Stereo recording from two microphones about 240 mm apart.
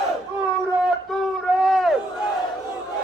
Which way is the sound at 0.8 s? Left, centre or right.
Centre.